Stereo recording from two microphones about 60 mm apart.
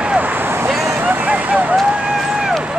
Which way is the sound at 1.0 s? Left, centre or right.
Right.